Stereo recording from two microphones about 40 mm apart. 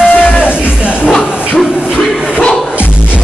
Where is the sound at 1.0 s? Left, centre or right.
Centre.